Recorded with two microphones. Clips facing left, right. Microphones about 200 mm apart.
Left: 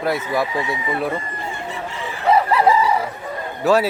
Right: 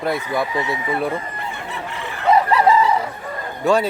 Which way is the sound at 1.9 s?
60° right (ahead or behind).